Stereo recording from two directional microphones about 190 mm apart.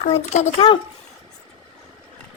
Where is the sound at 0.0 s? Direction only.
35° left (ahead or behind).